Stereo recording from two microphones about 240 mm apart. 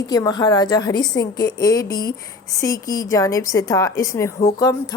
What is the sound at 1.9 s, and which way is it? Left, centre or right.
Speech, left.